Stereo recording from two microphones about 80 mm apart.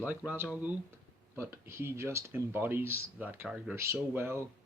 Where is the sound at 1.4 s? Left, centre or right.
Right.